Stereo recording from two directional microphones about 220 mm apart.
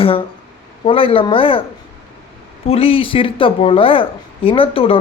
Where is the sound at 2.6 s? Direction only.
25° left (ahead or behind).